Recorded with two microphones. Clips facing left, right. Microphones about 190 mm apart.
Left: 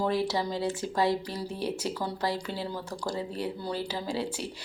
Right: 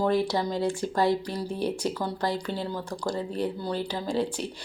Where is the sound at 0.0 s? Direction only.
5° left (ahead or behind).